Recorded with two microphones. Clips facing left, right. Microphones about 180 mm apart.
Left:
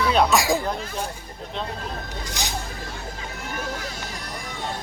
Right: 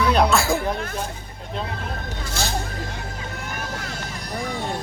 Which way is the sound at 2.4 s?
15° left (ahead or behind).